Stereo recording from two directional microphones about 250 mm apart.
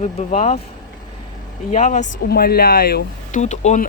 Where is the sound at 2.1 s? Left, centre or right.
Left.